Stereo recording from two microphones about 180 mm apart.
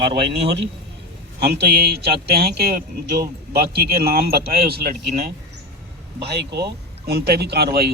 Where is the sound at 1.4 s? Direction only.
65° right (ahead or behind).